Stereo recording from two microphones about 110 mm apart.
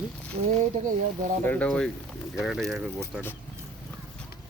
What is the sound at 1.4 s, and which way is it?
Speech, 10° left (ahead or behind).